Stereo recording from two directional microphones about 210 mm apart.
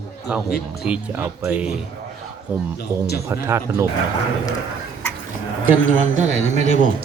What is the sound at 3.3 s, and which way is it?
Speech, 15° right (ahead or behind).